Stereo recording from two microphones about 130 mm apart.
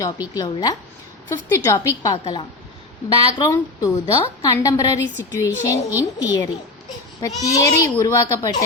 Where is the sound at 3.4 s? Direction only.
25° left (ahead or behind).